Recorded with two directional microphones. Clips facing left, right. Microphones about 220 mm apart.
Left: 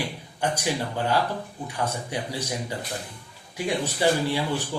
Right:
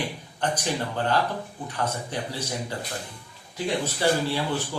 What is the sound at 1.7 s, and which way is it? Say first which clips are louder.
Speech: even; 10° left (ahead or behind).